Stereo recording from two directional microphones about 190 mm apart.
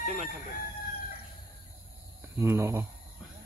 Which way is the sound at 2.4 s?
15° right (ahead or behind).